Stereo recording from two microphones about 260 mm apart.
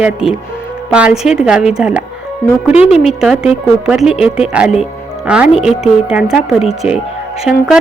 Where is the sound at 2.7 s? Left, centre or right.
Left.